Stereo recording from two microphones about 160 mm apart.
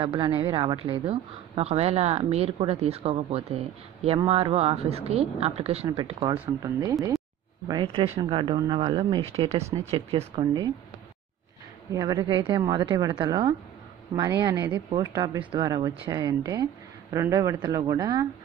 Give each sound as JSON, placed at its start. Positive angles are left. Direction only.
{"t": 0.0, "sound": "a woman's voice", "side_deg": -35}
{"t": 6.6, "sound": "a woman's voice", "side_deg": -20}
{"t": 11.9, "sound": "speech", "side_deg": -25}